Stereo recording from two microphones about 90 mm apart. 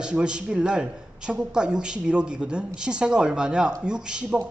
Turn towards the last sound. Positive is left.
turn(degrees=-10)  # may be behind; listen again after turning